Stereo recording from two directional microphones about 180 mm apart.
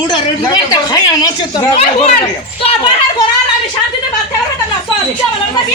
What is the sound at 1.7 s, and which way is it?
Speech, 35° left (ahead or behind).